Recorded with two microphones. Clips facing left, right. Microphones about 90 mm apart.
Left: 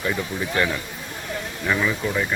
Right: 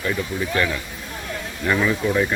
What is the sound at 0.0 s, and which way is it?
Speech, 15° left (ahead or behind).